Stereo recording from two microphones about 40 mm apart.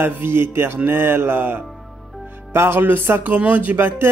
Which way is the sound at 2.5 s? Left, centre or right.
Right.